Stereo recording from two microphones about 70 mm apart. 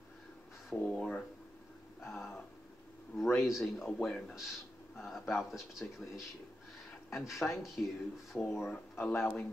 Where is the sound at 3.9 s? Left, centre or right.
Centre.